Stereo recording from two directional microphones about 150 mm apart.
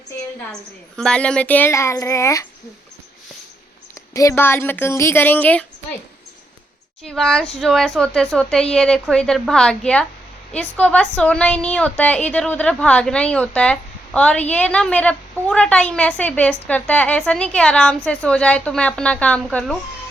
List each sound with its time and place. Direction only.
0.9 s a woman's voice: 5° left (ahead or behind)
4.1 s a woman's voice: 20° left (ahead or behind)
7.0 s a woman's voice: 5° left (ahead or behind)